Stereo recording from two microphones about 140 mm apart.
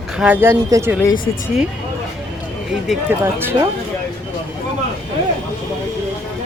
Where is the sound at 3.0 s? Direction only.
15° right (ahead or behind).